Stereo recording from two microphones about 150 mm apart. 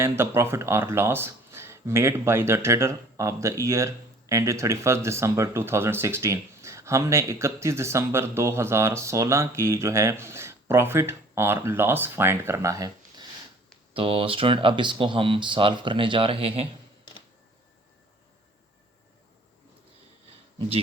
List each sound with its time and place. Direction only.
0.0 s speech: 15° right (ahead or behind)
13.9 s speech: 40° right (ahead or behind)